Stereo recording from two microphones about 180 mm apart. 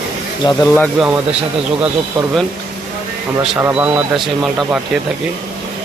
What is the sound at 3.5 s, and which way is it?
Speech, 10° right (ahead or behind).